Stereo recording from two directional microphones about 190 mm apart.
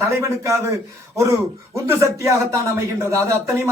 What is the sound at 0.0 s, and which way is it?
Speech, 15° right (ahead or behind).